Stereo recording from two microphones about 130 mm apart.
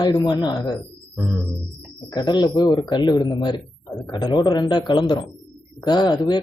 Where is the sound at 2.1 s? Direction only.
35° left (ahead or behind).